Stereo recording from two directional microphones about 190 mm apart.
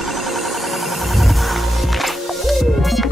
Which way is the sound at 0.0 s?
Centre (ahead or behind).